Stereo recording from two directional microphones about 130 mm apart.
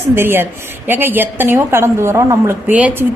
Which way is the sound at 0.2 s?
15° right (ahead or behind).